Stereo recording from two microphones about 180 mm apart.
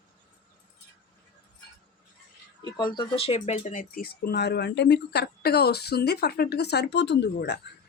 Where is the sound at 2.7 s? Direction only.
25° left (ahead or behind); by 7.6 s 75° left (ahead or behind).